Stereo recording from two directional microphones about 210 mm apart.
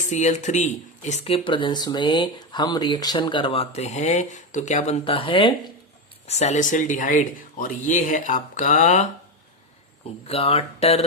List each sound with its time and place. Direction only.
0.0 s speech: 35° left (ahead or behind)
10.2 s speech: 30° left (ahead or behind)